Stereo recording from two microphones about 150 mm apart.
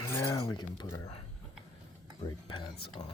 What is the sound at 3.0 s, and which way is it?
Speech, 30° left (ahead or behind).